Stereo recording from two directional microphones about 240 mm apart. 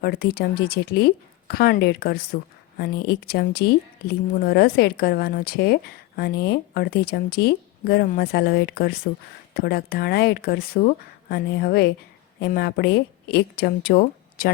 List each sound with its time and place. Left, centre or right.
0.0 s a woman's voice: left